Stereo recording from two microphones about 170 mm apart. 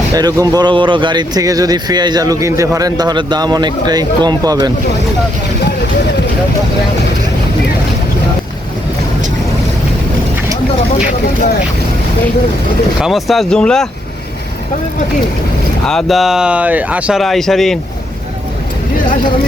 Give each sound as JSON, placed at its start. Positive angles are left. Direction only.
{"t": 0.1, "sound": "speech", "side_deg": -20}
{"t": 13.0, "sound": "speech", "side_deg": 0}
{"t": 15.9, "sound": "speech", "side_deg": 0}